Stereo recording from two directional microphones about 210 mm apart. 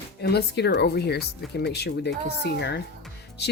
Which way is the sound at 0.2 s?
50° left (ahead or behind).